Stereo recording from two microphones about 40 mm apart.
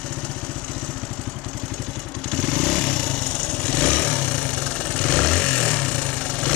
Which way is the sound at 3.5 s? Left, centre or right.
Left.